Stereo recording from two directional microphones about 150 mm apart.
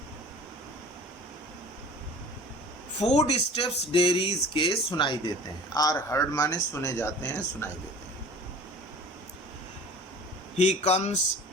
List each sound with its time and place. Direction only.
3.0 s speech: 45° left (ahead or behind)
5.7 s speech: 25° left (ahead or behind)
10.6 s speech: 50° left (ahead or behind)